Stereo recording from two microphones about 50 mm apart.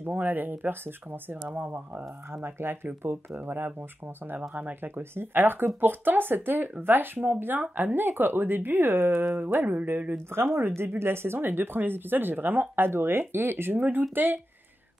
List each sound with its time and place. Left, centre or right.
0.0 s speech: right
2.4 s speech: right
4.4 s speech: right
4.8 s speech: right
10.3 s speech: right